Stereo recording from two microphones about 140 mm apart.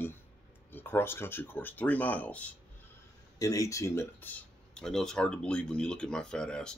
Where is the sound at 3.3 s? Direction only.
25° left (ahead or behind).